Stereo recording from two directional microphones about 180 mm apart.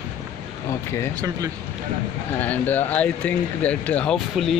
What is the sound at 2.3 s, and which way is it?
Speech, 10° left (ahead or behind).